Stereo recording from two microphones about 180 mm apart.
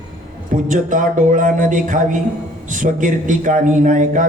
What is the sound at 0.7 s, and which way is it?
Speech, 45° right (ahead or behind).